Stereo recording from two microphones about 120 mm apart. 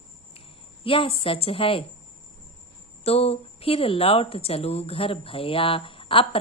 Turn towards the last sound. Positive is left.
turn(degrees=50)  # may be behind; listen again after turning